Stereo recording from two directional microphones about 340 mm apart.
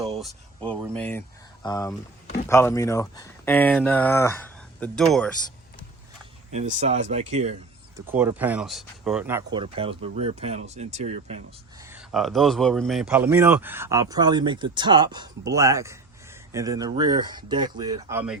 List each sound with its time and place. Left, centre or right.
0.7 s speech: centre
6.5 s speech: right
7.9 s speech: centre
11.8 s speech: centre